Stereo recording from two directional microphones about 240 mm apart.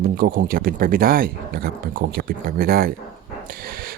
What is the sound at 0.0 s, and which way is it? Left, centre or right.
Speech, right.